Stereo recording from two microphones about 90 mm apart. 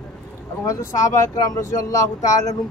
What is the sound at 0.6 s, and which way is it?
Speech, 35° left (ahead or behind).